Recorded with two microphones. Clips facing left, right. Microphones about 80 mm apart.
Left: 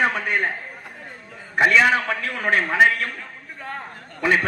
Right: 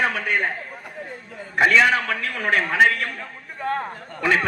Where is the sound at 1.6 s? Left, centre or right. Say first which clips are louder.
Even; centre.